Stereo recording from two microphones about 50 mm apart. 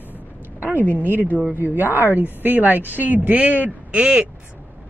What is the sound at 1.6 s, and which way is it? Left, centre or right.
A woman's voice, right.